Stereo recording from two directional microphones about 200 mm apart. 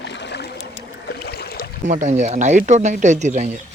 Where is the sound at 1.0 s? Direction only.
55° left (ahead or behind).